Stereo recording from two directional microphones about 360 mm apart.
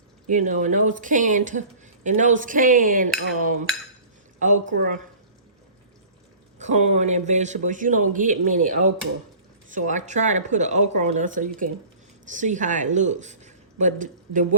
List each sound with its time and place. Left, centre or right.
0.3 s speech: right
6.6 s speech: centre